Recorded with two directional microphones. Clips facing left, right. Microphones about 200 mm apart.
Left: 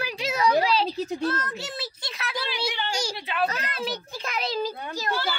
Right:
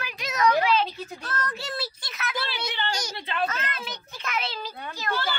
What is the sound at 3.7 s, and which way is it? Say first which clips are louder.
Speech: left 6 dB; 35° left (ahead or behind).